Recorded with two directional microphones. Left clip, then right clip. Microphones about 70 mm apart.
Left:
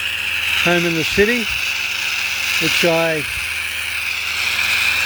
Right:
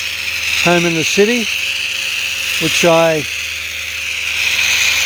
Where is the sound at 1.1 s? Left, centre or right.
Right.